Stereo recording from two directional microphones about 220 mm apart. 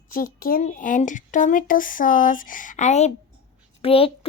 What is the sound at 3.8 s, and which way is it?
Speech, 25° left (ahead or behind).